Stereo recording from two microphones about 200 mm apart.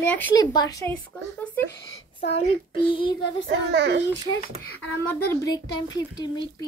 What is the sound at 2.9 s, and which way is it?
Speech, 25° left (ahead or behind).